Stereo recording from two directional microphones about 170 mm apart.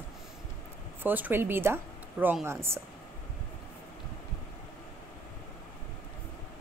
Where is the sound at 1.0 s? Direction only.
10° right (ahead or behind).